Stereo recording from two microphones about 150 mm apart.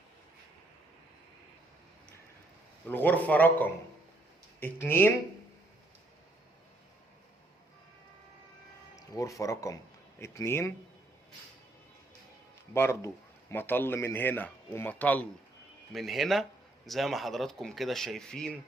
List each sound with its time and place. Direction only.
2.8 s speech: 10° left (ahead or behind)
9.0 s speech: 20° left (ahead or behind)
12.7 s speech: 15° left (ahead or behind)